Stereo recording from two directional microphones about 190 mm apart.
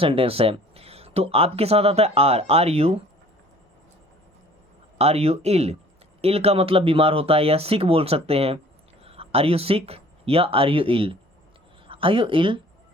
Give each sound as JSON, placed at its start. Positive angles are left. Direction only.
{"t": 0.0, "sound": "speech", "side_deg": -30}
{"t": 4.9, "sound": "speech", "side_deg": -35}